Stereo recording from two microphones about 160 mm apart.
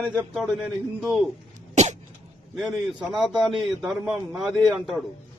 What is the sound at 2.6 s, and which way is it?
A man's voice, centre (ahead or behind).